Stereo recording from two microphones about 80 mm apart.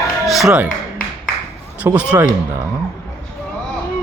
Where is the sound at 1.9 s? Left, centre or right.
Centre.